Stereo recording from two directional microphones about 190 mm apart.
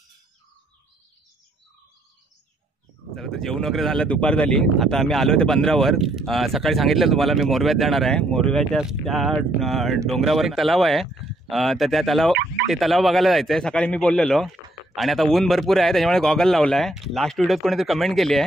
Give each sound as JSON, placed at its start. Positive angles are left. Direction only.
{"t": 3.2, "sound": "speech", "side_deg": 0}